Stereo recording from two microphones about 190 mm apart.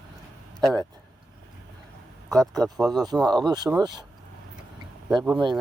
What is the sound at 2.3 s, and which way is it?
Speech, 20° right (ahead or behind).